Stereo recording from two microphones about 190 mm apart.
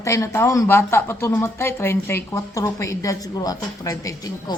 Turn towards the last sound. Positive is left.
turn(degrees=20)  # may be behind; listen again after turning